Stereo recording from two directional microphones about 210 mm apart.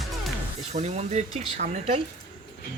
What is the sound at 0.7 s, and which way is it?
Speech, 30° right (ahead or behind).